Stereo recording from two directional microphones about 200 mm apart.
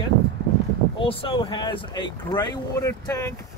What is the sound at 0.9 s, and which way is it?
Speech, 25° left (ahead or behind).